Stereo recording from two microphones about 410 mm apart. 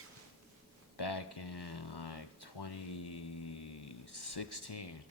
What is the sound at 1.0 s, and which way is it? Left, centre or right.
Speech, left.